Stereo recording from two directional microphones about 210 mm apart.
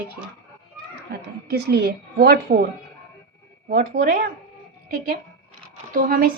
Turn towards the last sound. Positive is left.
turn(degrees=-45)  # may be behind; listen again after turning